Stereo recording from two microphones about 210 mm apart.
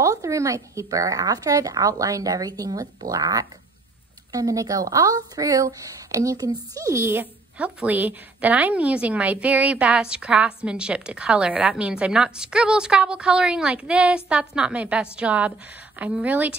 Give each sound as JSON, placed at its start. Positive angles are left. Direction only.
{"t": 0.0, "sound": "speech", "side_deg": -15}